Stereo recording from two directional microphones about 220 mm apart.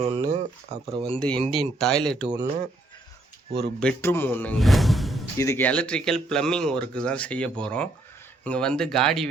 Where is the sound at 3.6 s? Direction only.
5° left (ahead or behind).